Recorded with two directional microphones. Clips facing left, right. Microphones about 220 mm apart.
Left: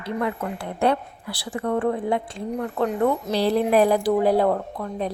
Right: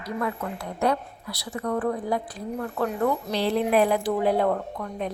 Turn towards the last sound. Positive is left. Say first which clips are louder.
# left 3 dB
turn(degrees=35)  # may be behind; listen again after turning